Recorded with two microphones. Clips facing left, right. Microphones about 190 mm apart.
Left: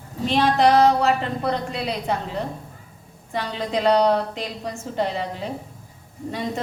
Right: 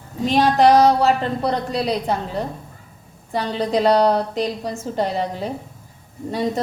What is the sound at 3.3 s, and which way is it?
A woman's voice, 35° right (ahead or behind).